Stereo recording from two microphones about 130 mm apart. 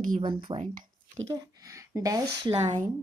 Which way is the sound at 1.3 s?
25° right (ahead or behind).